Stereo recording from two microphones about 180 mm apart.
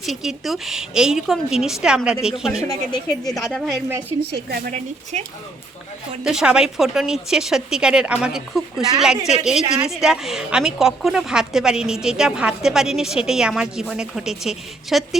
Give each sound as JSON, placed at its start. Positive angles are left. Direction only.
{"t": 0.0, "sound": "a woman's voice", "side_deg": 0}
{"t": 2.6, "sound": "speech", "side_deg": 20}
{"t": 3.5, "sound": "a woman's voice", "side_deg": -5}
{"t": 4.3, "sound": "speech", "side_deg": -65}
{"t": 5.1, "sound": "speech", "side_deg": -40}
{"t": 6.2, "sound": "a woman's voice", "side_deg": -5}